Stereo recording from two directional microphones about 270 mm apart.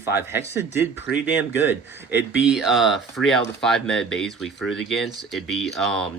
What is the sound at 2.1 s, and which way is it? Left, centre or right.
Speech, left.